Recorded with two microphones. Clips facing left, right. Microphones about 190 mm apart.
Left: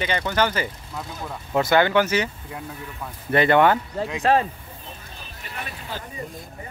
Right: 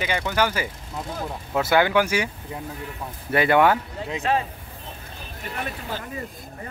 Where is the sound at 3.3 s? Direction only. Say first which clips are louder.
Left 1 dB; 5° right (ahead or behind).